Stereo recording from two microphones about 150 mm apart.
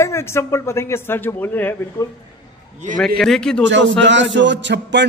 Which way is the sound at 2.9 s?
5° left (ahead or behind).